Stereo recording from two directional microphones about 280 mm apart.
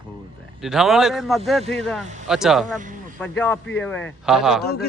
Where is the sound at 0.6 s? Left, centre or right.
Centre.